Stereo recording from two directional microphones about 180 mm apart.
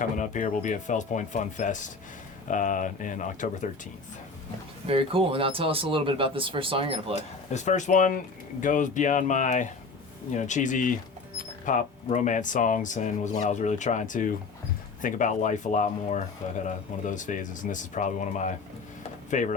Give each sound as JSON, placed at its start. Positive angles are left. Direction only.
{"t": 0.0, "sound": "speech", "side_deg": 45}
{"t": 4.9, "sound": "speech", "side_deg": -30}
{"t": 7.2, "sound": "speech", "side_deg": 40}